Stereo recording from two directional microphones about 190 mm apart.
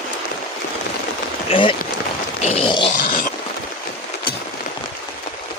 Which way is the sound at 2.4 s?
35° left (ahead or behind).